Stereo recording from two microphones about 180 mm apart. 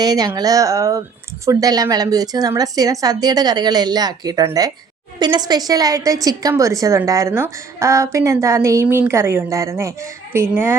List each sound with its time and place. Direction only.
0.0 s a woman's voice: 20° right (ahead or behind)